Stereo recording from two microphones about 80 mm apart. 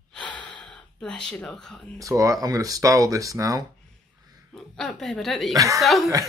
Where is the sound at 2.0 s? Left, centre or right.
Right.